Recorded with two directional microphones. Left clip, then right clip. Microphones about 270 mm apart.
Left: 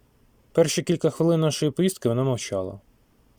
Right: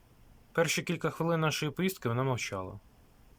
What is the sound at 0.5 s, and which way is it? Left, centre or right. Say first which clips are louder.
Speech: left 9 dB; centre.